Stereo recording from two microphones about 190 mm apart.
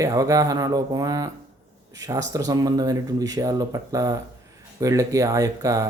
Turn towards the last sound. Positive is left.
turn(degrees=-15)  # may be behind; listen again after turning